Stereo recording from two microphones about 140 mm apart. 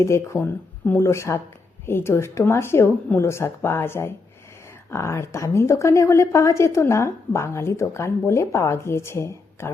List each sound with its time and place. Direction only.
0.0 s a woman's voice: 20° left (ahead or behind)